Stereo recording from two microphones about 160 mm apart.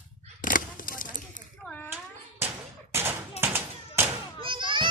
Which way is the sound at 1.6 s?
10° left (ahead or behind).